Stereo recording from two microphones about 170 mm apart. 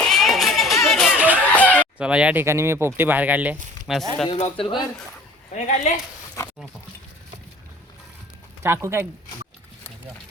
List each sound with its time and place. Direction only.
0.0 s a sound: centre (ahead or behind)
1.5 s chicken: 10° left (ahead or behind)
2.0 s speech: 5° right (ahead or behind)
4.3 s speech: 35° left (ahead or behind)
5.5 s speech: 45° left (ahead or behind)
8.6 s speech: 15° right (ahead or behind)